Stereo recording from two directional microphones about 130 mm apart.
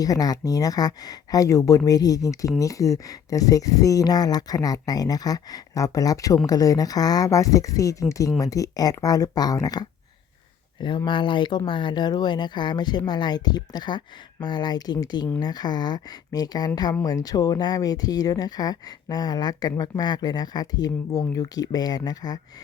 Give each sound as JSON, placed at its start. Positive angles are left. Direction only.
{"t": 0.0, "sound": "speech", "side_deg": 30}